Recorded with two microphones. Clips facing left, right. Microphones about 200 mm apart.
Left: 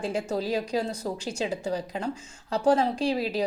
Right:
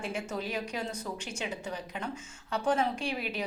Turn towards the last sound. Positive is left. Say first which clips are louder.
# left 8 dB
turn(degrees=35)  # may be behind; listen again after turning